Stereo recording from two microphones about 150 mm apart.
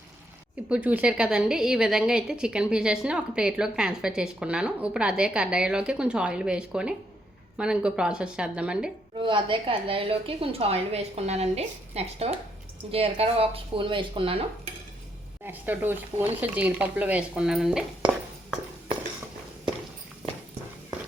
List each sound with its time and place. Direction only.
0.7 s a woman's voice: 10° right (ahead or behind)
9.1 s a woman's voice: 35° right (ahead or behind)
15.4 s speech: 10° right (ahead or behind)